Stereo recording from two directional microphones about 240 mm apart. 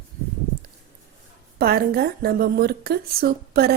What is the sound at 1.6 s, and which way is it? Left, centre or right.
A woman's voice, right.